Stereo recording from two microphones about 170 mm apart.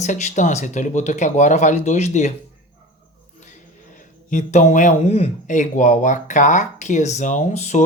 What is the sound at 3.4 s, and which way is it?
Speech, 45° left (ahead or behind).